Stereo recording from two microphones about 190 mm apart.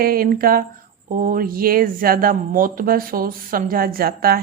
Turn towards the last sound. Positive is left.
turn(degrees=-50)  # may be behind; listen again after turning